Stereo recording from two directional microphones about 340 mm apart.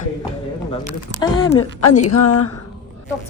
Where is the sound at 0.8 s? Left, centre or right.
Centre.